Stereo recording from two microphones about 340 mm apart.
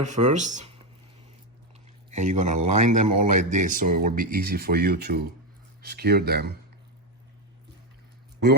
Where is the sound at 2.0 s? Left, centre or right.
Right.